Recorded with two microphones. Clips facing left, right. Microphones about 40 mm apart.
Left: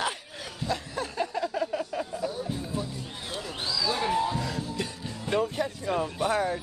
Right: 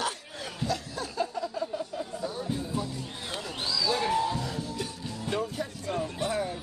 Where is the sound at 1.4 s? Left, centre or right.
Left.